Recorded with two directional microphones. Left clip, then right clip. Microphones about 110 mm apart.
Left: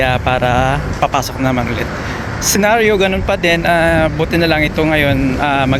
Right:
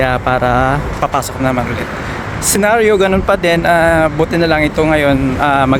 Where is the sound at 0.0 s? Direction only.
40° right (ahead or behind).